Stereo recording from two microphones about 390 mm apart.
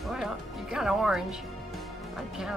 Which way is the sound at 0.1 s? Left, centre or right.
Centre.